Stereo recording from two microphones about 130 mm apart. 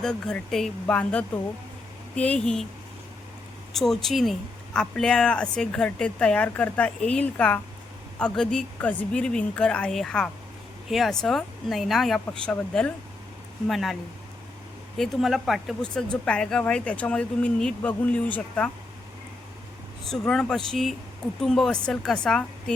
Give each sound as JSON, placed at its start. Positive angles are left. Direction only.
{"t": 0.0, "sound": "speech", "side_deg": 5}
{"t": 3.8, "sound": "speech", "side_deg": 0}
{"t": 14.9, "sound": "speech", "side_deg": 0}
{"t": 20.1, "sound": "speech", "side_deg": 5}